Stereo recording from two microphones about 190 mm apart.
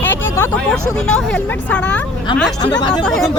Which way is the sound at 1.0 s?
5° left (ahead or behind).